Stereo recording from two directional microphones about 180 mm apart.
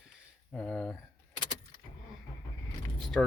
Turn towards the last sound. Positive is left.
turn(degrees=5)  # may be behind; listen again after turning